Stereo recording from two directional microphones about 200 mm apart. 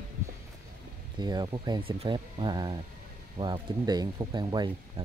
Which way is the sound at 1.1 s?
20° right (ahead or behind).